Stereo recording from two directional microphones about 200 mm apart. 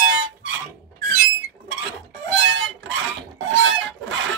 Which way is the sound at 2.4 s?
70° right (ahead or behind).